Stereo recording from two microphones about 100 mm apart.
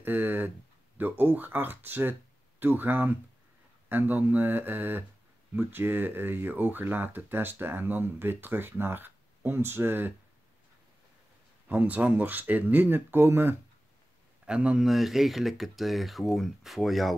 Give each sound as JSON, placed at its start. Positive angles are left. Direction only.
{"t": 0.0, "sound": "a sound", "side_deg": -20}
{"t": 0.9, "sound": "speech", "side_deg": -20}
{"t": 11.6, "sound": "speech", "side_deg": -15}
{"t": 14.4, "sound": "speech", "side_deg": -10}